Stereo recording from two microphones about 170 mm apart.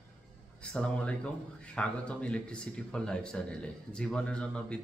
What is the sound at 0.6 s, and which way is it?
Speech, 5° left (ahead or behind).